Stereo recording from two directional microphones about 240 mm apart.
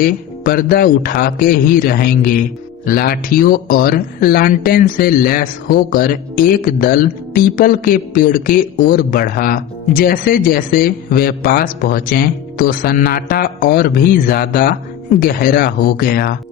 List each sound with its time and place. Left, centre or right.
0.0 s speech: left